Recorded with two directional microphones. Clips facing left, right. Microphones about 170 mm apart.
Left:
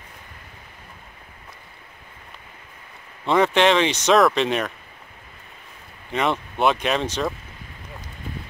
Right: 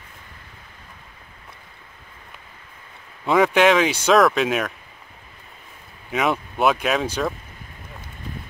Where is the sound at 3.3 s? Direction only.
Centre (ahead or behind).